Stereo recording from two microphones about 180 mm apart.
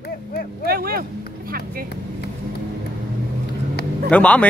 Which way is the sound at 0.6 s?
55° right (ahead or behind).